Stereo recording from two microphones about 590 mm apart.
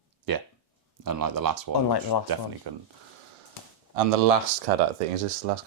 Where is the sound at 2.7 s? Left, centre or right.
Right.